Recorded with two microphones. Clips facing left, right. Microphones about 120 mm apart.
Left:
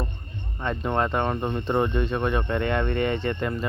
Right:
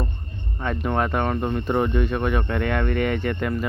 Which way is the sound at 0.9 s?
Centre (ahead or behind).